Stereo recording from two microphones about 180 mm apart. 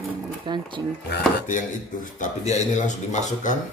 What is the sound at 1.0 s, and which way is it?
Speech, 65° left (ahead or behind).